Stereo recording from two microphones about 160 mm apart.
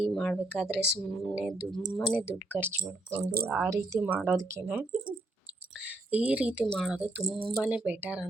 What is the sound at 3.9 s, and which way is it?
Speech, 10° right (ahead or behind).